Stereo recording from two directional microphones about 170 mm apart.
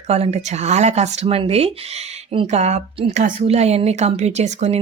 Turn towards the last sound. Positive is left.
turn(degrees=-40)  # may be behind; listen again after turning